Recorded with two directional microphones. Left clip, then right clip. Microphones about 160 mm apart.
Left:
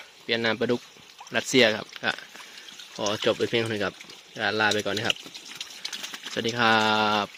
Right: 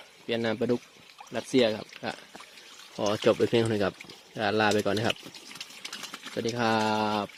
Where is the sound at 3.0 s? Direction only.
25° right (ahead or behind).